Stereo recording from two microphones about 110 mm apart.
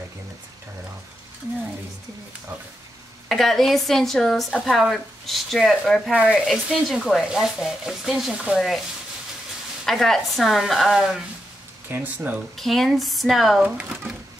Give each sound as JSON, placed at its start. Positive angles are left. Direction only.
{"t": 3.3, "sound": "speech", "side_deg": 0}
{"t": 9.8, "sound": "speech", "side_deg": 5}
{"t": 11.9, "sound": "speech", "side_deg": -15}
{"t": 12.5, "sound": "speech", "side_deg": 0}